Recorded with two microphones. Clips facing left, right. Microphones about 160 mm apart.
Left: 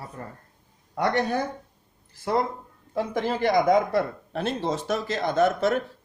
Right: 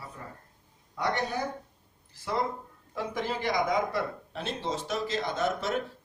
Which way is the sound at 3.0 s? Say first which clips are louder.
Left 7 dB; 50° left (ahead or behind).